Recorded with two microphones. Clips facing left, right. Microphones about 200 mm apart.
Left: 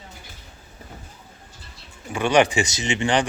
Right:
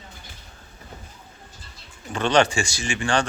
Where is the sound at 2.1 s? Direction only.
10° left (ahead or behind).